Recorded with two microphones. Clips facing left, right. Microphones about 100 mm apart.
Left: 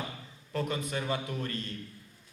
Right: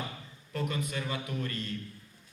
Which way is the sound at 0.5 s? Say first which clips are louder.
Left 1 dB; 35° left (ahead or behind).